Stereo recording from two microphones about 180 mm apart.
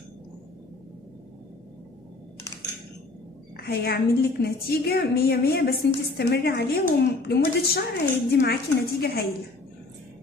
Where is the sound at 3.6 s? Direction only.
60° left (ahead or behind).